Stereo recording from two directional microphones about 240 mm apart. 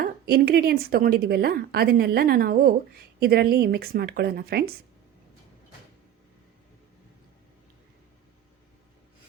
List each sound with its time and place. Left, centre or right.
0.0 s a woman's voice: right